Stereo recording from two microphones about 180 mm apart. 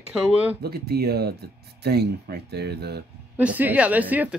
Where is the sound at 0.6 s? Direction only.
60° right (ahead or behind).